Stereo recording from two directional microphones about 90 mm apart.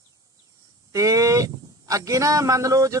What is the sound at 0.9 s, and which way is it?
Speech, 40° right (ahead or behind).